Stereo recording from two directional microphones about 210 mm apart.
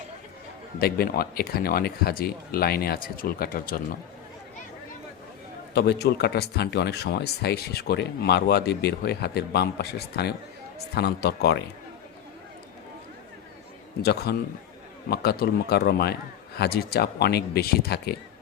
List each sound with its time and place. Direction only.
0.8 s speech: 45° left (ahead or behind)
5.7 s speech: 50° left (ahead or behind)
14.0 s speech: 50° left (ahead or behind)